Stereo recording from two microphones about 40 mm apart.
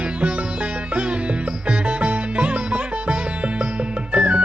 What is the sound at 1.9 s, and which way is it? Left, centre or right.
Music, right.